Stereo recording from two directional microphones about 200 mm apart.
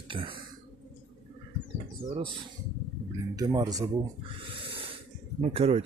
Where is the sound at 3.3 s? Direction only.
20° right (ahead or behind).